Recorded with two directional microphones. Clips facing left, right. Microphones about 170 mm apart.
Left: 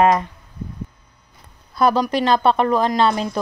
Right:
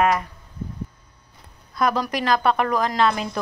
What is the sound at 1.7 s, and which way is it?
Speech, 30° left (ahead or behind).